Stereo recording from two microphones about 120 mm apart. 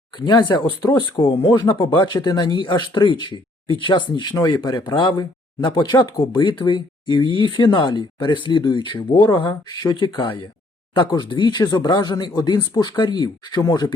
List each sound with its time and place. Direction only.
0.2 s speech: 40° left (ahead or behind)